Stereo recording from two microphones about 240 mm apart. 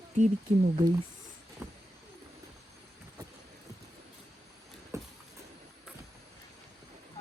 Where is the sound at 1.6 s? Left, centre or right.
Centre.